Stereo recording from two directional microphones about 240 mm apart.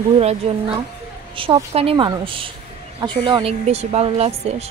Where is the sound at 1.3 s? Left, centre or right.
Right.